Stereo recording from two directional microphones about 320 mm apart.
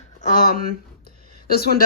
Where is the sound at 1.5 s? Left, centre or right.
Left.